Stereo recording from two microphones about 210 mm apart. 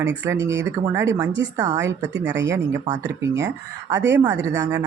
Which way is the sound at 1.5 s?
20° right (ahead or behind).